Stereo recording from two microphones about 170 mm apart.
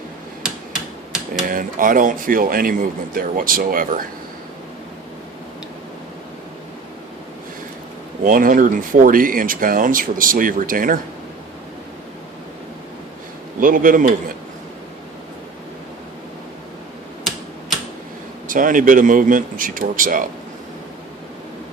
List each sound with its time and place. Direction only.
1.5 s speech: 55° right (ahead or behind)
8.2 s speech: 50° right (ahead or behind)
13.6 s speech: 55° right (ahead or behind)
18.4 s speech: 50° right (ahead or behind)